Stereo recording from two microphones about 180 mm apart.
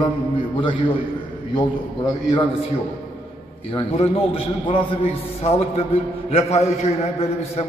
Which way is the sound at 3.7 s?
35° left (ahead or behind).